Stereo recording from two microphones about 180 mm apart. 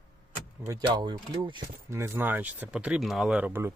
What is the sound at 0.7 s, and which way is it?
Speech, 20° right (ahead or behind).